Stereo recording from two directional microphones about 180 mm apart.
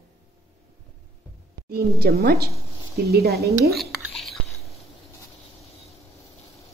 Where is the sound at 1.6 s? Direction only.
60° right (ahead or behind).